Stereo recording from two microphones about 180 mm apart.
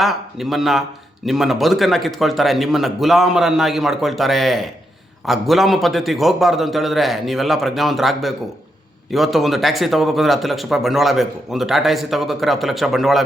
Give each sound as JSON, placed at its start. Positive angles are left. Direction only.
{"t": 0.0, "sound": "speech", "side_deg": 0}